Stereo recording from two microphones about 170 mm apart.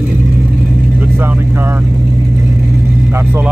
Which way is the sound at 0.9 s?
10° right (ahead or behind).